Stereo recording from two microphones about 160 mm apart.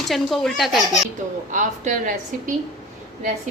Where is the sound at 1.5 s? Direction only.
50° right (ahead or behind).